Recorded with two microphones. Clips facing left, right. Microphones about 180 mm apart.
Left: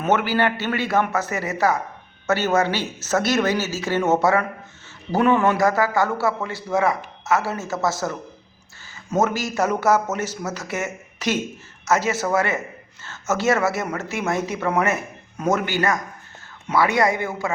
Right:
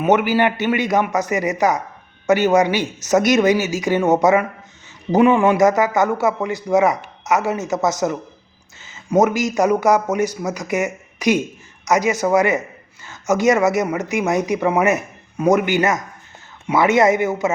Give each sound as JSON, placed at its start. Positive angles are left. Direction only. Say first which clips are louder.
{"t": 0.0, "sound": "a man's voice", "louder": "right 4 dB", "side_deg": -15}